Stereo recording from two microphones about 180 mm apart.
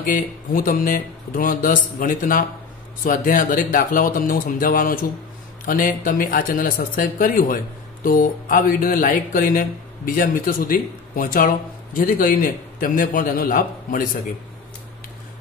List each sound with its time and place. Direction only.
0.0 s speech: 50° left (ahead or behind)